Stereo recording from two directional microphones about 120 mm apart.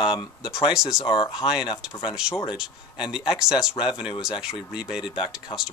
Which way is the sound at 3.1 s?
5° right (ahead or behind).